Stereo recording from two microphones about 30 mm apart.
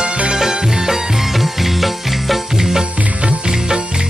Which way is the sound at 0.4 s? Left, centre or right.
Centre.